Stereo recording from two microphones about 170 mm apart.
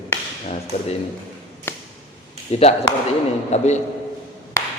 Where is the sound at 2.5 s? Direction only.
40° left (ahead or behind).